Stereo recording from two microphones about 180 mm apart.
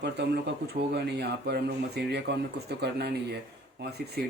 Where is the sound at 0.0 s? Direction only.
70° right (ahead or behind).